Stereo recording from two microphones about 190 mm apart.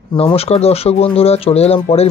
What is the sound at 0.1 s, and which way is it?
Speech, 30° left (ahead or behind).